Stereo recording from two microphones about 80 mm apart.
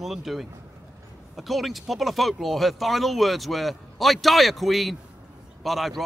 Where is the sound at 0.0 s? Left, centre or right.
Centre.